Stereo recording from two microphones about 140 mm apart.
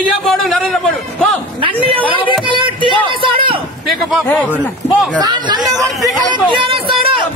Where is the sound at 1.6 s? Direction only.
40° right (ahead or behind).